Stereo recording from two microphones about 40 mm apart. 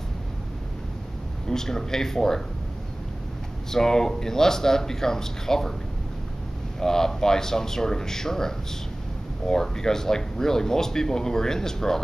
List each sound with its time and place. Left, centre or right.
1.5 s speech: centre
3.7 s speech: centre
6.8 s speech: centre